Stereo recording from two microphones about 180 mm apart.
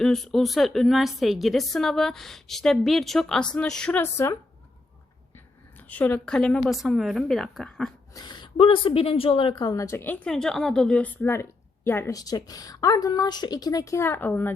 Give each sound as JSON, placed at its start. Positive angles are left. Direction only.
{"t": 0.0, "sound": "a woman's voice", "side_deg": 0}
{"t": 5.9, "sound": "a woman's voice", "side_deg": 10}
{"t": 8.1, "sound": "speech", "side_deg": 25}